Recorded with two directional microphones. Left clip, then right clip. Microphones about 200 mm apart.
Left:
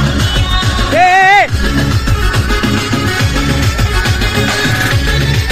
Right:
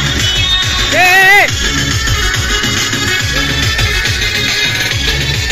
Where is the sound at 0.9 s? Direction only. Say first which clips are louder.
Even; 20° left (ahead or behind).